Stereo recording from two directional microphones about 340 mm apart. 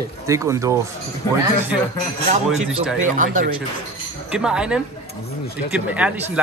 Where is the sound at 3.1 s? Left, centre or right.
Right.